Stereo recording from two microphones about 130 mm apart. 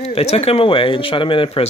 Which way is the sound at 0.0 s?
55° left (ahead or behind).